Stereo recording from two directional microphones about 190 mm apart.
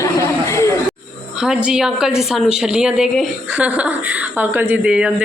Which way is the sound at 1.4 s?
5° right (ahead or behind).